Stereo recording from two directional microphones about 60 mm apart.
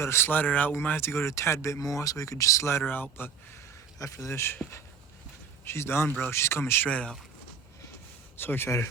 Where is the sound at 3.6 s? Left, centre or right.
Left.